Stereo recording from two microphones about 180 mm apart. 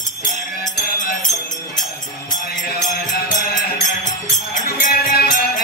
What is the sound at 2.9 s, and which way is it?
Music, 55° left (ahead or behind).